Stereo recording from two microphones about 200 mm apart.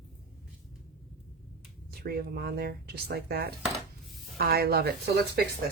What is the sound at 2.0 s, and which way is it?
Speech, 50° right (ahead or behind).